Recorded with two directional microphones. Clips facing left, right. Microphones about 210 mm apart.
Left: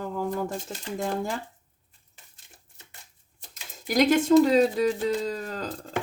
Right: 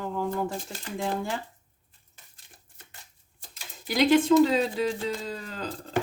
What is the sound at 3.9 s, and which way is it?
Speech, 45° left (ahead or behind).